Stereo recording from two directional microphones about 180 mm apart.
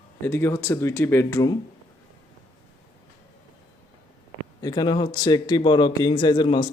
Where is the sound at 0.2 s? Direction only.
15° left (ahead or behind).